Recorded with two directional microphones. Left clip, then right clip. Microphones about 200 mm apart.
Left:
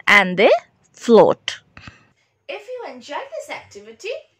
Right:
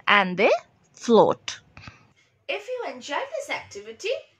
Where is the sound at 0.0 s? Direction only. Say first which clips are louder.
Left 6 dB; 25° left (ahead or behind).